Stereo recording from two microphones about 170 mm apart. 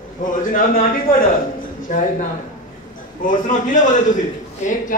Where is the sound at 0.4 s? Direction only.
55° left (ahead or behind).